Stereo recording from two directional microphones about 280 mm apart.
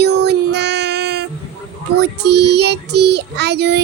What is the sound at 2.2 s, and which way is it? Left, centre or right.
A child's voice, right.